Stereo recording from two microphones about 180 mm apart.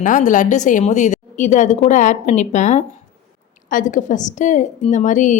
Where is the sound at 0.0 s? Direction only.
45° left (ahead or behind).